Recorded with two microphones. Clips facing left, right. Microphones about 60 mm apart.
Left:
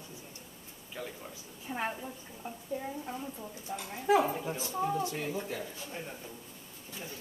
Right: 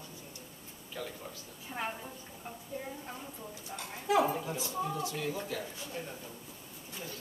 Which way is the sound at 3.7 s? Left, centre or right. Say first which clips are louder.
Left 4 dB; centre.